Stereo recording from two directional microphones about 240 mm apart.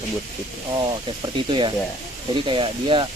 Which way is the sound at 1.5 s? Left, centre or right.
Centre.